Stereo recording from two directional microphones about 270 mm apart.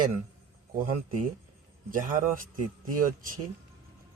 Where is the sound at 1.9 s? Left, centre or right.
Right.